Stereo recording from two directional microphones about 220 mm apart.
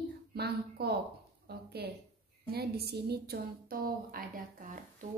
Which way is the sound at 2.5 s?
45° right (ahead or behind).